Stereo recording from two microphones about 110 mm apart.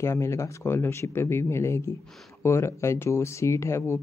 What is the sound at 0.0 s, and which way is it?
Speech, 25° left (ahead or behind).